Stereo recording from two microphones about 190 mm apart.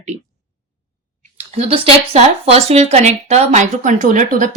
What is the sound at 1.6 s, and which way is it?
A woman's voice, 35° right (ahead or behind).